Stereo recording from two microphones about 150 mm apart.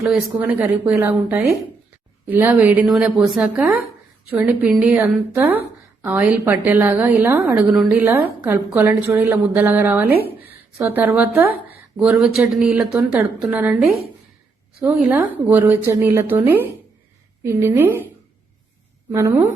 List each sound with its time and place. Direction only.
0.0 s a woman's voice: 5° right (ahead or behind)
19.1 s a woman's voice: 20° right (ahead or behind)